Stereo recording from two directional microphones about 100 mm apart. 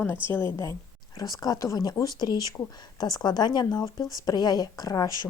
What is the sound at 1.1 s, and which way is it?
A woman's voice, 35° left (ahead or behind).